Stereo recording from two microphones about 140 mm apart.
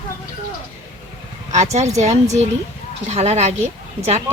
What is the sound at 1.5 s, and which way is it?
Speech, 55° right (ahead or behind).